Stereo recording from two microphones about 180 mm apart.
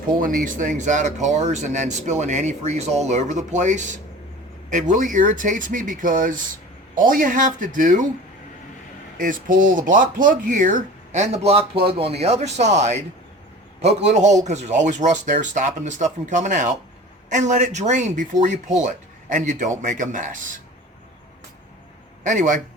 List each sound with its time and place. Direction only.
0.2 s speech: 50° right (ahead or behind)
9.1 s speech: 50° right (ahead or behind)
22.2 s a man's voice: 45° right (ahead or behind)